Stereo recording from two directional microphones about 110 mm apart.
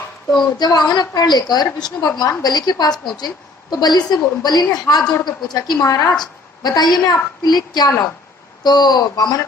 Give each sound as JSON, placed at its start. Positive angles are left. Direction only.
{"t": 0.5, "sound": "a woman's voice", "side_deg": 40}